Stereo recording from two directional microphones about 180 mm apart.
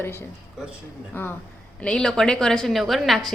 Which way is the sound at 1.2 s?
10° left (ahead or behind).